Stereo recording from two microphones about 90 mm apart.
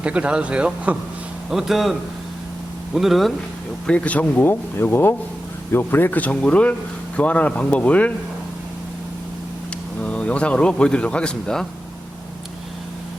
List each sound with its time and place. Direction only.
0.0 s a man's voice: 10° right (ahead or behind)
3.8 s speech: 15° left (ahead or behind)
10.0 s speech: 15° left (ahead or behind)